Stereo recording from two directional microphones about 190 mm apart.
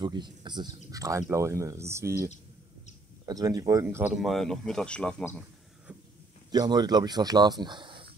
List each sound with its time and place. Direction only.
0.0 s speech: 25° right (ahead or behind); by 5.4 s 5° left (ahead or behind)
6.5 s speech: 20° right (ahead or behind)